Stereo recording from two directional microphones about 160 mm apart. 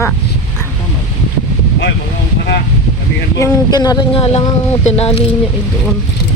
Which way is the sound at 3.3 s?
20° left (ahead or behind).